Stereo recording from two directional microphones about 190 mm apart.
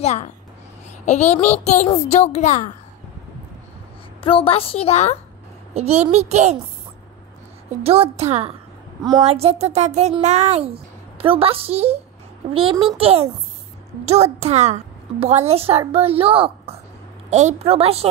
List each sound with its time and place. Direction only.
0.0 s child singing: 35° left (ahead or behind)
4.2 s child singing: 30° left (ahead or behind)
5.8 s a woman's voice: 35° right (ahead or behind)
7.8 s a woman's voice: 30° right (ahead or behind)